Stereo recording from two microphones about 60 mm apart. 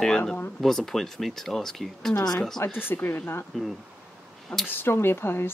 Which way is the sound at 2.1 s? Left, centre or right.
Left.